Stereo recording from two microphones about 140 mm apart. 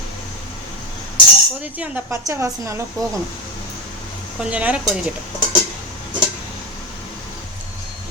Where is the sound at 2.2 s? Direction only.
20° right (ahead or behind).